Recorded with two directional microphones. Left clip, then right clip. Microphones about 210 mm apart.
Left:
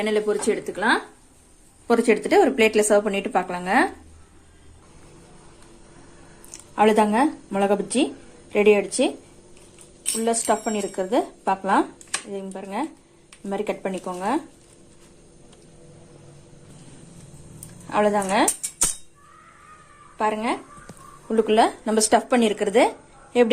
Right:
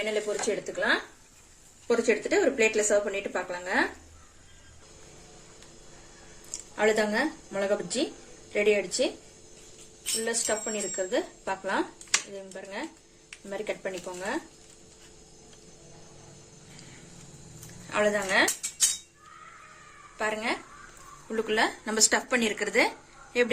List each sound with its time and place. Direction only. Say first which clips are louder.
0.0 s speech: left 7 dB; 45° left (ahead or behind)
6.7 s speech: left 7 dB; 35° left (ahead or behind)
10.2 s speech: left 9 dB; 35° left (ahead or behind)
17.8 s speech: left 5 dB; 30° left (ahead or behind)
20.1 s speech: left 6 dB; 30° left (ahead or behind)